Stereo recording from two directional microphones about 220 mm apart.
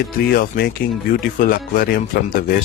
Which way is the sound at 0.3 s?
45° left (ahead or behind).